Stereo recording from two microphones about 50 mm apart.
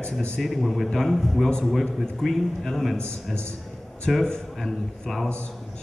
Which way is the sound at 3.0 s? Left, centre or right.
Centre.